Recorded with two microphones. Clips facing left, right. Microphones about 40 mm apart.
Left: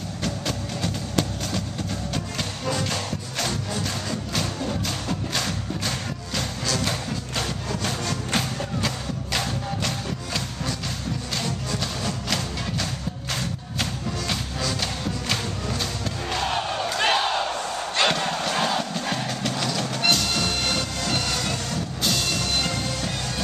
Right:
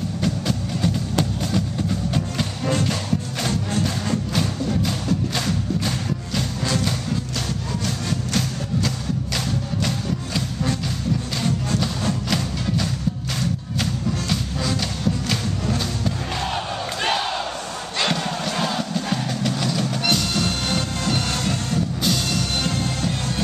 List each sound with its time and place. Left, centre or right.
0.2 s music: centre
7.8 s music: left
8.8 s music: centre
9.8 s music: centre
16.3 s crowd: centre
17.9 s music: centre
20.3 s music: centre
22.0 s music: centre